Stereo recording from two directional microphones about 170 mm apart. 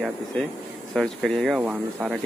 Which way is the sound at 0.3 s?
5° left (ahead or behind).